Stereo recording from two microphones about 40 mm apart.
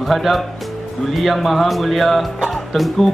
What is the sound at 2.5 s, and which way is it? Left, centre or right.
Music, centre.